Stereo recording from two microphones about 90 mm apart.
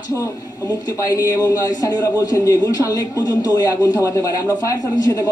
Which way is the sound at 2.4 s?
40° left (ahead or behind).